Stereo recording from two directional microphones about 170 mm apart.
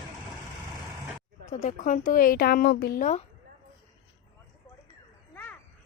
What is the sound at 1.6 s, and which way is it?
Speech, 50° left (ahead or behind).